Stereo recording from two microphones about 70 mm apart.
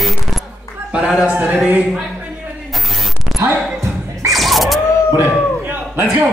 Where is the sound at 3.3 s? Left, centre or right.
Right.